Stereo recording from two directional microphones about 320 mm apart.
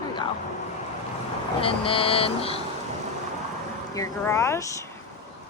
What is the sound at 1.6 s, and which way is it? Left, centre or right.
Speech, centre.